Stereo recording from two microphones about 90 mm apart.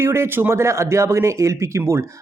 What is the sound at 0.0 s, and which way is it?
A man's voice, 30° right (ahead or behind).